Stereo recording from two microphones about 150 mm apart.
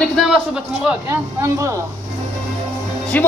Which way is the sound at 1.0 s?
15° right (ahead or behind).